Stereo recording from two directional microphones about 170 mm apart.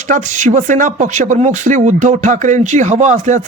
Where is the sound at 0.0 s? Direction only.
45° right (ahead or behind).